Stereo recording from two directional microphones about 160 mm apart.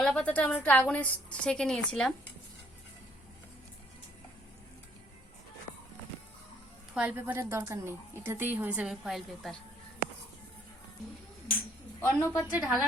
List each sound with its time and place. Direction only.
0.0 s a woman's voice: 5° left (ahead or behind)
6.9 s a woman's voice: 10° right (ahead or behind)
11.9 s a woman's voice: 15° left (ahead or behind)
12.5 s a woman's voice: 10° right (ahead or behind)